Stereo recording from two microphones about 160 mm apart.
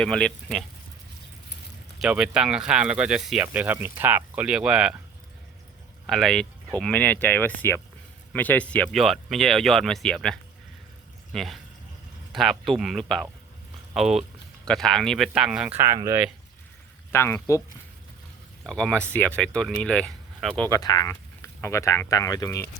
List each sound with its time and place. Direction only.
0.0 s speech: 5° left (ahead or behind)
2.0 s speech: 5° right (ahead or behind)
6.1 s speech: 5° left (ahead or behind)
15.8 s speech: 20° right (ahead or behind)
17.1 s speech: 15° left (ahead or behind)
18.6 s speech: 5° left (ahead or behind)
20.7 s speech: 20° left (ahead or behind)